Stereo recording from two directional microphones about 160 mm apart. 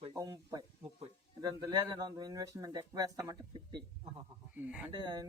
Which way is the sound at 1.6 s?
25° right (ahead or behind).